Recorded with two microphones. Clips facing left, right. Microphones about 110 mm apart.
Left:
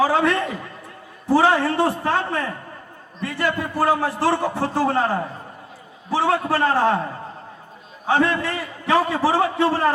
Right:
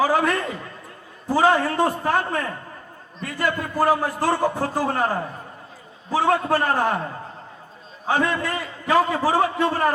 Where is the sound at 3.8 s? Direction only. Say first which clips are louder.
Left 1 dB; 25° left (ahead or behind).